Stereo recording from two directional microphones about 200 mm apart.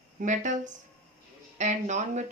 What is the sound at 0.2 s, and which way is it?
Speech, 40° right (ahead or behind).